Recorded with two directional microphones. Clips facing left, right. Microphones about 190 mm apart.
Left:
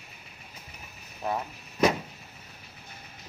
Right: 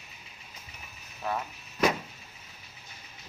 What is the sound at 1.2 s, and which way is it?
Speech, 20° left (ahead or behind).